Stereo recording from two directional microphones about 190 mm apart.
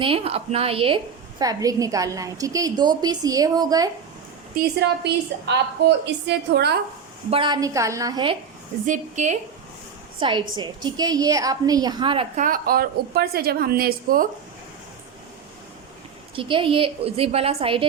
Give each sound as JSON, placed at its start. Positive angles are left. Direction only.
{"t": 0.0, "sound": "a woman's voice", "side_deg": -30}
{"t": 4.5, "sound": "a woman's voice", "side_deg": -65}
{"t": 7.3, "sound": "a woman's voice", "side_deg": -25}
{"t": 8.9, "sound": "a woman's voice", "side_deg": -40}
{"t": 10.2, "sound": "a woman's voice", "side_deg": -25}
{"t": 12.4, "sound": "a woman's voice", "side_deg": -50}
{"t": 16.3, "sound": "a woman's voice", "side_deg": -25}